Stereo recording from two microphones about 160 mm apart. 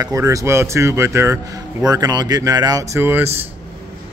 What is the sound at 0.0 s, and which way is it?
Speech, 20° right (ahead or behind).